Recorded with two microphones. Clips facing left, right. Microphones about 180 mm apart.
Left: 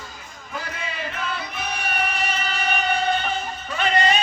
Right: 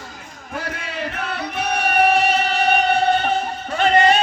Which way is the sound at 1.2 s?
65° right (ahead or behind).